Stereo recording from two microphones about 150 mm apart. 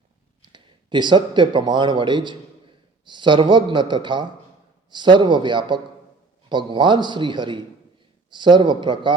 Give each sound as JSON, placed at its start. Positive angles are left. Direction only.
{"t": 0.5, "sound": "a man's voice", "side_deg": -30}